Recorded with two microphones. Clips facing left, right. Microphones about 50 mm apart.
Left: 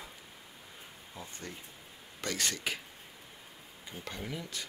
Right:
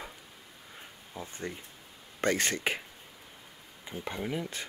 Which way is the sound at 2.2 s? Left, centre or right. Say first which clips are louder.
Right 7 dB; right.